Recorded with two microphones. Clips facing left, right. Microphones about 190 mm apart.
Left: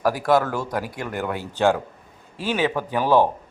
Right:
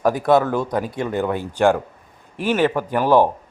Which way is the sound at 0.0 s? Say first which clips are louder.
Right 3 dB; 20° right (ahead or behind).